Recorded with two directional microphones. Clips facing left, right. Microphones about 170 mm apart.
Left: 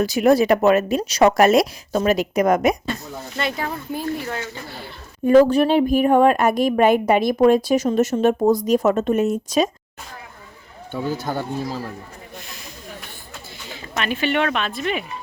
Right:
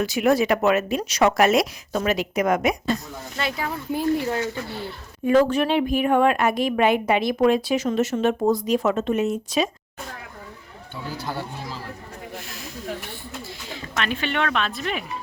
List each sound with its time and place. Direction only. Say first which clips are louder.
0.0 s a woman's voice: left 4 dB; 35° left (ahead or behind)
3.3 s speech: left 2 dB; 5° right (ahead or behind)
3.9 s speech: right 6 dB; 20° right (ahead or behind)
5.2 s a woman's voice: left 5 dB; 40° left (ahead or behind)
11.3 s speech: left 6 dB; 45° left (ahead or behind)
12.5 s snake: right 2 dB; centre (ahead or behind)
13.7 s speech: left 2 dB; 5° left (ahead or behind)